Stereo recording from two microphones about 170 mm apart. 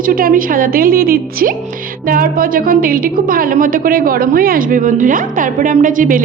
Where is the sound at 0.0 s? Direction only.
55° right (ahead or behind).